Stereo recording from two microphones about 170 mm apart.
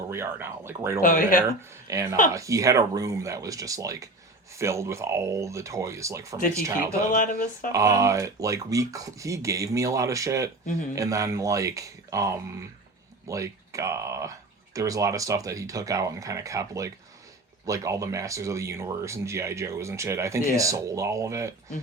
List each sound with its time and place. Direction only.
0.1 s speech: 15° right (ahead or behind)
1.0 s speech: 55° left (ahead or behind)
1.9 s speech: 20° right (ahead or behind)
7.1 s speech: 55° left (ahead or behind)
7.7 s speech: 20° right (ahead or behind)